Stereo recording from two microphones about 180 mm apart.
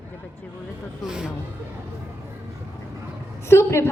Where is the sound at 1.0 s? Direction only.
5° right (ahead or behind).